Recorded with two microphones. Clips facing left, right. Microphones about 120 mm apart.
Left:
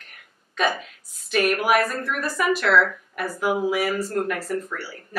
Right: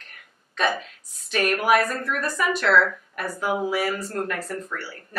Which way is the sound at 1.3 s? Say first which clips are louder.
Even; 5° left (ahead or behind).